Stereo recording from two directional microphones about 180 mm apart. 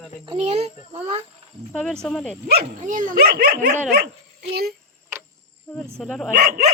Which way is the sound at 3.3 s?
60° right (ahead or behind).